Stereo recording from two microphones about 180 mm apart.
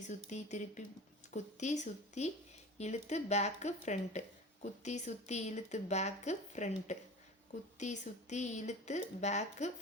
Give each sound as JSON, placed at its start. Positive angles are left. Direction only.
{"t": 0.1, "sound": "speech", "side_deg": 40}